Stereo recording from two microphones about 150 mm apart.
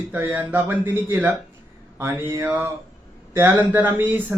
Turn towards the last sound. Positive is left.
turn(degrees=-10)  # may be behind; listen again after turning